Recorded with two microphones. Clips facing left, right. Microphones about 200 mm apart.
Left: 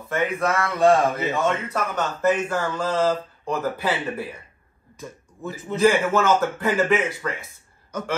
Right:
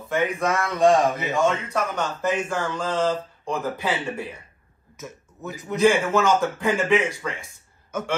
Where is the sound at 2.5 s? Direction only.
5° left (ahead or behind).